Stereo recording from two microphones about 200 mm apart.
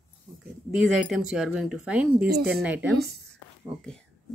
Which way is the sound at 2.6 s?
5° right (ahead or behind).